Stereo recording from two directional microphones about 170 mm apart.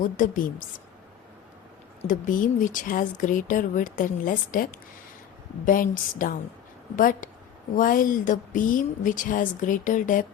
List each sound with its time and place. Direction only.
0.0 s speech: 50° left (ahead or behind)
2.0 s speech: 50° left (ahead or behind)